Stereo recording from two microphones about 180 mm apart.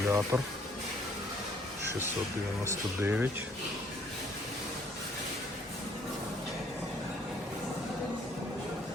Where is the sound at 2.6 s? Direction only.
10° right (ahead or behind).